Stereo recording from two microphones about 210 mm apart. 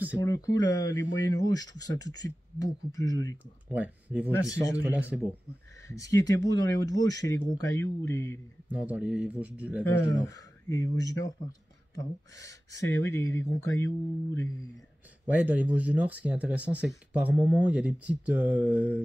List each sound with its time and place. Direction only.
0.2 s speech: 15° left (ahead or behind)
3.7 s speech: 5° right (ahead or behind)
5.9 s speech: 15° left (ahead or behind)
8.6 s speech: 5° right (ahead or behind)
9.8 s speech: 15° left (ahead or behind)
15.2 s speech: 10° right (ahead or behind)